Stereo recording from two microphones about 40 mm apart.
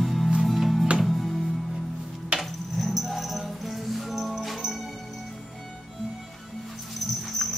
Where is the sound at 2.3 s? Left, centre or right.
Right.